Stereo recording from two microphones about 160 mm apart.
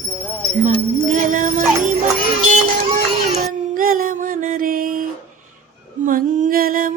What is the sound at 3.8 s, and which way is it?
Music, 60° right (ahead or behind).